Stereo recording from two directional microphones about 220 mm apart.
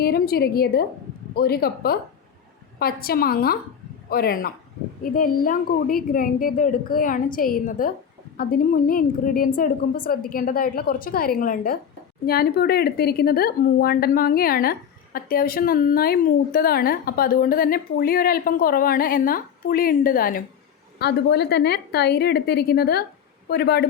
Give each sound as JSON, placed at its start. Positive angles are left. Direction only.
{"t": 0.0, "sound": "a woman's voice", "side_deg": 45}